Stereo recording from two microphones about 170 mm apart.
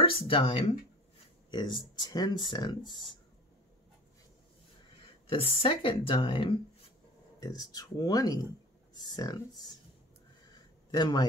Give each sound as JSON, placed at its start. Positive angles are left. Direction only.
{"t": 0.0, "sound": "speech", "side_deg": 30}
{"t": 5.2, "sound": "speech", "side_deg": 30}
{"t": 10.5, "sound": "a sound", "side_deg": 25}